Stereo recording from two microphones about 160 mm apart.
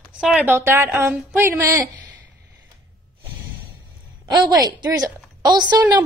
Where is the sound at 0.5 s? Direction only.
15° right (ahead or behind).